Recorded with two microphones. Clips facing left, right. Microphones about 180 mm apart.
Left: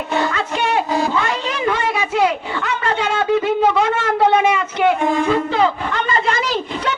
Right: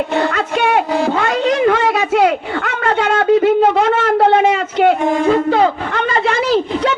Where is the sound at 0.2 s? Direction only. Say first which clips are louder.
Right 2 dB; 55° right (ahead or behind).